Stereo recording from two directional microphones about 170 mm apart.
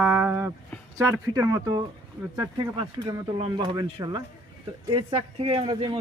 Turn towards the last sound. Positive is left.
turn(degrees=-30)  # may be behind; listen again after turning